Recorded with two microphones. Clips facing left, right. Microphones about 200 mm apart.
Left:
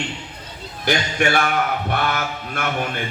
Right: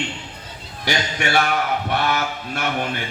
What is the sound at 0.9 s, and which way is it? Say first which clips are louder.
Speech: left 3 dB; 50° left (ahead or behind).